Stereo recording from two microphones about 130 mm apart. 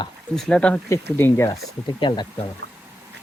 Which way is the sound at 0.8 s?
20° left (ahead or behind).